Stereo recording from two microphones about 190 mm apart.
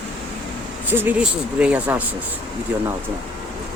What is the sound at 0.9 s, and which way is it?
Speech, 10° right (ahead or behind).